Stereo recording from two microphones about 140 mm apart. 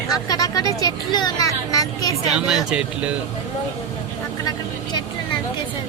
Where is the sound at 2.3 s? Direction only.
5° right (ahead or behind).